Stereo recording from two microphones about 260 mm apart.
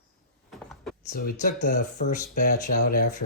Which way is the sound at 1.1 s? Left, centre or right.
Left.